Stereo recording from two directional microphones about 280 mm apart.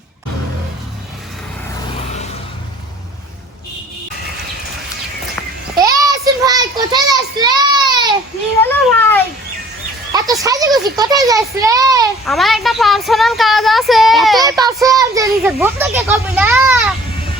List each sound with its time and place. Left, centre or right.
5.7 s child singing: centre
8.6 s a sound: centre
10.4 s a child's voice: centre
12.2 s speech: centre
14.6 s a child's voice: centre